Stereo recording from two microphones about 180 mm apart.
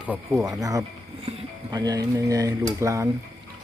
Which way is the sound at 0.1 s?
15° right (ahead or behind).